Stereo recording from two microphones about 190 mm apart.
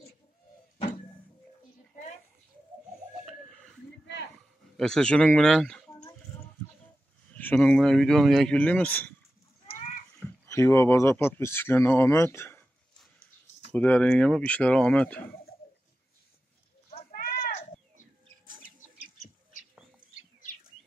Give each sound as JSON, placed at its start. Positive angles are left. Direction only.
{"t": 3.3, "sound": "a sound", "side_deg": 0}
{"t": 4.7, "sound": "speech", "side_deg": 5}
{"t": 7.3, "sound": "speech", "side_deg": 5}
{"t": 10.2, "sound": "speech", "side_deg": 15}
{"t": 13.7, "sound": "speech", "side_deg": 5}
{"t": 17.1, "sound": "a sound", "side_deg": 50}
{"t": 18.4, "sound": "bird", "side_deg": -45}